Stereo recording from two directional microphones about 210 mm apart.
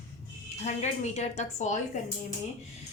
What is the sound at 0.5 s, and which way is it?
A woman's voice, 35° left (ahead or behind).